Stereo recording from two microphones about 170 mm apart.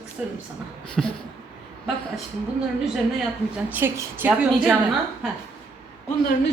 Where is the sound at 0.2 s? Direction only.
5° right (ahead or behind).